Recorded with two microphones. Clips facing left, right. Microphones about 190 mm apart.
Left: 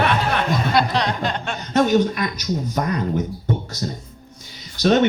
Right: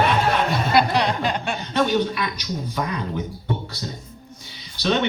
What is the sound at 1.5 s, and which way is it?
Speech, 45° left (ahead or behind).